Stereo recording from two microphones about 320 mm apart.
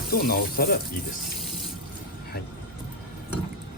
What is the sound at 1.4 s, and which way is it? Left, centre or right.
Water tap, centre.